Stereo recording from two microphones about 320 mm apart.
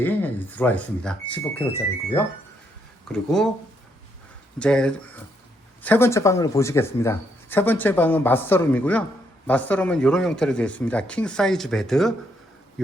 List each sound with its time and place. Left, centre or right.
0.0 s speech: centre
4.6 s speech: centre